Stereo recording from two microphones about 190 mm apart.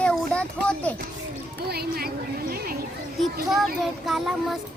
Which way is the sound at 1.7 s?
55° right (ahead or behind).